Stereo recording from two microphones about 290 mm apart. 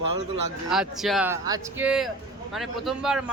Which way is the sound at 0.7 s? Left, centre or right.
Centre.